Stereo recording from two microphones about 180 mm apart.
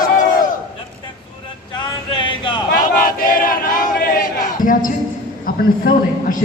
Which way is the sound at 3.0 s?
50° left (ahead or behind).